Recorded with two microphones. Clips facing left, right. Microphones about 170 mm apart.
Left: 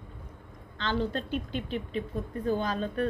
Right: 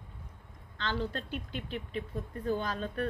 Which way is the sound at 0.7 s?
20° left (ahead or behind).